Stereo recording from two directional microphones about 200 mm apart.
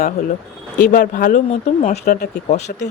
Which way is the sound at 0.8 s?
40° left (ahead or behind).